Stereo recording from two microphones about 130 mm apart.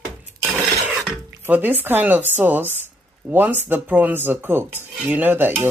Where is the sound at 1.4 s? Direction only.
15° right (ahead or behind).